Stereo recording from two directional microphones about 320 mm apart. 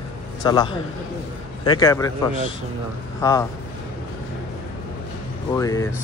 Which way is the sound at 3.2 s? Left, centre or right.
Centre.